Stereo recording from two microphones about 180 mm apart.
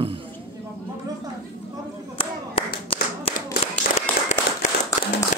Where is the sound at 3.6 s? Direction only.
35° left (ahead or behind).